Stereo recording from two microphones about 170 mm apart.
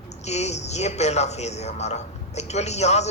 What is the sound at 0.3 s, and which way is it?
A man's voice, 40° left (ahead or behind).